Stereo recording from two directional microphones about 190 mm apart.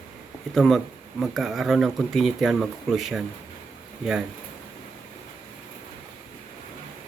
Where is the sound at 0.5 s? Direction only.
Centre (ahead or behind).